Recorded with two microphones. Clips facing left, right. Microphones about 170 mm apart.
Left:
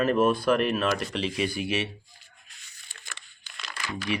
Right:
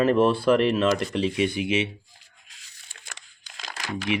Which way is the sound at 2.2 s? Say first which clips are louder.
Even; 90° right.